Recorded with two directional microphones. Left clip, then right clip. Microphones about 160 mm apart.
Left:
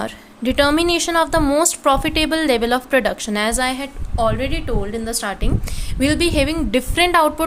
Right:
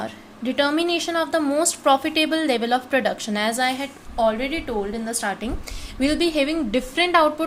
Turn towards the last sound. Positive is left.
turn(degrees=25)  # may be behind; listen again after turning